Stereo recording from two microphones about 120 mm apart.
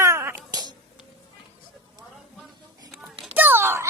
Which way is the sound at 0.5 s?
35° right (ahead or behind).